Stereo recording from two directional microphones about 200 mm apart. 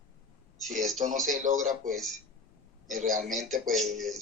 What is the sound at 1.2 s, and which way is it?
Speech, 40° right (ahead or behind).